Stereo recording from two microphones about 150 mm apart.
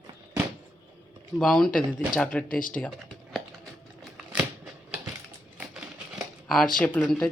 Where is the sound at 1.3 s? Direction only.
Centre (ahead or behind).